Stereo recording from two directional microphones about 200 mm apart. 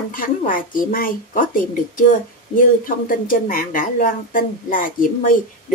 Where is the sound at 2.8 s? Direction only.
45° left (ahead or behind).